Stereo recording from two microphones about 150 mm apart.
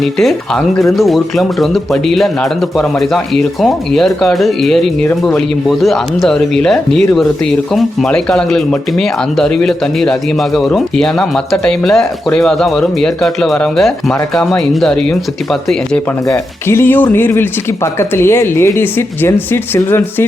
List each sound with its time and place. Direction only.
0.0 s speech: centre (ahead or behind)
16.2 s speech: 15° left (ahead or behind)